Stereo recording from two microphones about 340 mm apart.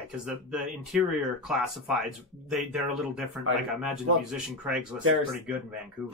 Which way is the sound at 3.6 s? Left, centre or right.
Centre.